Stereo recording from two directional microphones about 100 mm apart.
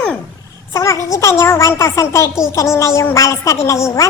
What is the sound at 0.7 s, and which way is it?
A woman's voice, 30° left (ahead or behind).